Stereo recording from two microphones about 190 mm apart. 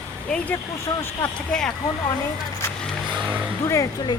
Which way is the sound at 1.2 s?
5° left (ahead or behind).